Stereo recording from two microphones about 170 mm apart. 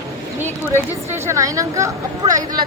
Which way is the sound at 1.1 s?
15° right (ahead or behind).